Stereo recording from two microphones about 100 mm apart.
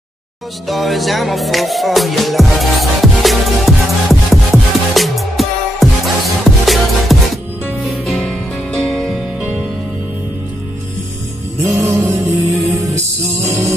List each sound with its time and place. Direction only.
0.7 s music: centre (ahead or behind)
11.8 s music: 20° right (ahead or behind)